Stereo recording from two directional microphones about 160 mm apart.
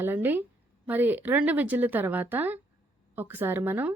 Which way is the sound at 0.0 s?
10° right (ahead or behind).